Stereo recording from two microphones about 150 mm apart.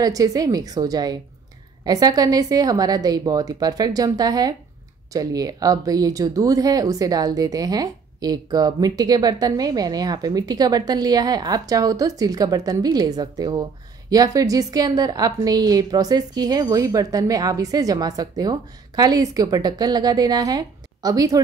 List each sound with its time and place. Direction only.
0.0 s speech: 25° right (ahead or behind)